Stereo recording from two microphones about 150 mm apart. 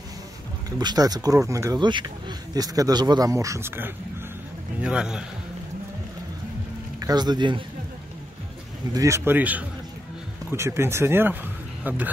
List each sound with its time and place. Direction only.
0.7 s a man's voice: 25° right (ahead or behind); by 5.2 s 5° right (ahead or behind)
7.0 s speech: 25° right (ahead or behind)
8.9 s speech: 20° right (ahead or behind)